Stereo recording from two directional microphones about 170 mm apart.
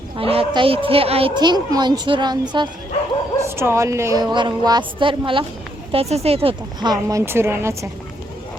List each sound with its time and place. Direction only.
0.2 s speech: 35° right (ahead or behind)
3.4 s a woman's voice: 15° right (ahead or behind)